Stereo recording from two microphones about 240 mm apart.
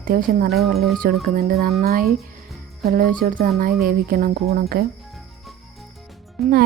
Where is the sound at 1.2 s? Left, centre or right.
Right.